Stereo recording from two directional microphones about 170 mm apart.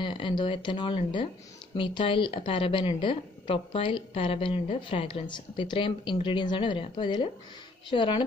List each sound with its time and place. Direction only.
0.0 s a woman's voice: 30° left (ahead or behind)